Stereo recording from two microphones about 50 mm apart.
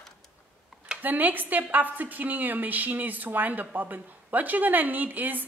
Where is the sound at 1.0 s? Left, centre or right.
Right.